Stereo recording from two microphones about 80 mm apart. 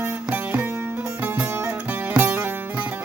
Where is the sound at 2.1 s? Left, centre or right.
Right.